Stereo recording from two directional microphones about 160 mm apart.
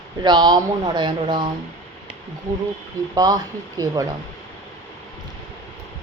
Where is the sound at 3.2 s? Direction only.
25° right (ahead or behind).